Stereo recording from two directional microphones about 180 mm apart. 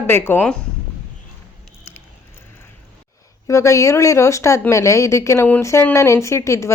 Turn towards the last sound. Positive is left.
turn(degrees=15)  # may be behind; listen again after turning